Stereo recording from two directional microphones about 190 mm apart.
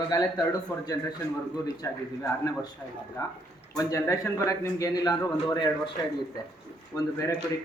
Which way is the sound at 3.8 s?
15° left (ahead or behind).